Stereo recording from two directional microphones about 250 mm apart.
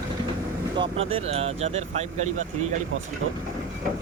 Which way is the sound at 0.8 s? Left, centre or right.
Right.